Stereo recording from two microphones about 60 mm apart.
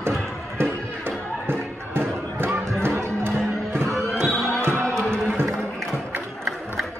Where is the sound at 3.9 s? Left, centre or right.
Centre.